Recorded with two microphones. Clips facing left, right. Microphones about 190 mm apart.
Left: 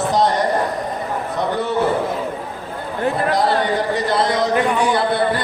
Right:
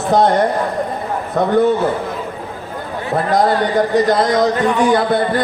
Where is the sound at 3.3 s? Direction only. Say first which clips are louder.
Right 5 dB; 45° right (ahead or behind).